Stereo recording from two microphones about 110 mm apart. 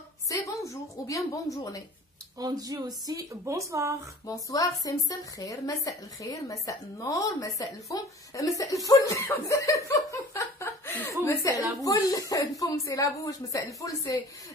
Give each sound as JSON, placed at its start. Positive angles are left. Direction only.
{"t": 0.3, "sound": "a woman's voice", "side_deg": 30}
{"t": 2.3, "sound": "speech", "side_deg": -35}
{"t": 4.3, "sound": "a woman's voice", "side_deg": 30}